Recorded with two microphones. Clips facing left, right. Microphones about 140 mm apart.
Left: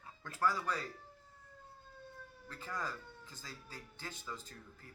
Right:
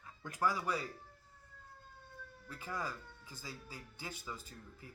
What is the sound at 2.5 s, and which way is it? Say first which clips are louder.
Speech: right 1 dB; 10° right (ahead or behind).